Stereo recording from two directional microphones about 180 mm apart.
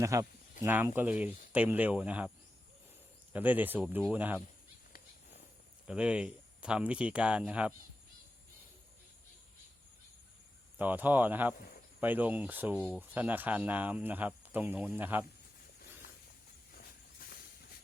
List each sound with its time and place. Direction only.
0.0 s speech: 15° right (ahead or behind)
3.3 s speech: 10° right (ahead or behind)
5.9 s speech: 5° right (ahead or behind)
10.8 s speech: 10° right (ahead or behind)
16.7 s hiss: 55° left (ahead or behind)